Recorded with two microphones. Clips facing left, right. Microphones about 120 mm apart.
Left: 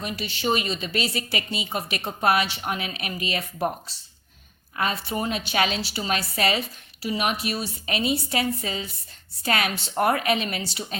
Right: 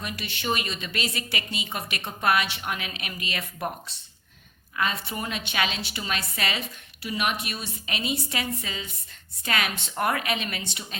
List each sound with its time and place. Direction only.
0.0 s a woman's voice: 35° left (ahead or behind)
4.8 s a woman's voice: 35° left (ahead or behind)